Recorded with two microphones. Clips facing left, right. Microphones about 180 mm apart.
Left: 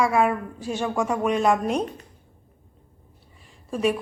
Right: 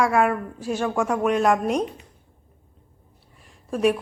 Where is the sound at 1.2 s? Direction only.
10° right (ahead or behind).